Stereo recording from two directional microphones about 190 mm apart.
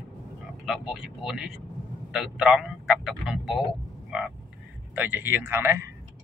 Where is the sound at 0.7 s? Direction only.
Centre (ahead or behind).